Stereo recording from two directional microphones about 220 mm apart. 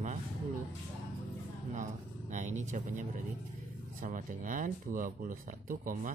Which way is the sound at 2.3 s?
35° right (ahead or behind).